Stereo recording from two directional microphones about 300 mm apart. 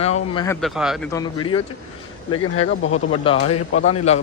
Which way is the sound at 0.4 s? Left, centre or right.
Centre.